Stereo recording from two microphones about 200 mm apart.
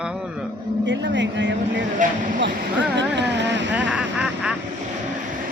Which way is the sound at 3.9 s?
5° right (ahead or behind).